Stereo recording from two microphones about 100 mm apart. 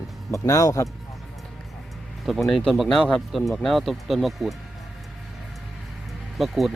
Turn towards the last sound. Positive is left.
turn(degrees=0)  # may be behind; listen again after turning